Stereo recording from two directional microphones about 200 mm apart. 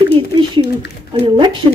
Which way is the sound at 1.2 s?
25° right (ahead or behind).